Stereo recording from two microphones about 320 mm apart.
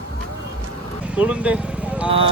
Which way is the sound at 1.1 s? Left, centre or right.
Centre.